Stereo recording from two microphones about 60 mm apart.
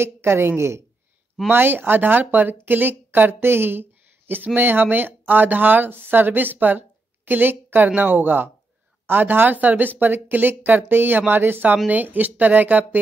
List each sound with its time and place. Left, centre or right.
0.0 s a woman's voice: right